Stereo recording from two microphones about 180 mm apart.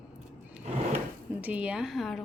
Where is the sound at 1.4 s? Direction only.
5° right (ahead or behind).